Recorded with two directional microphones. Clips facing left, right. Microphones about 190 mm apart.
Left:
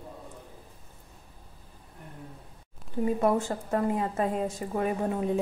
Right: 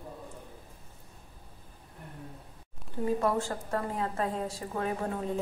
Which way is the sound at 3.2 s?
20° left (ahead or behind).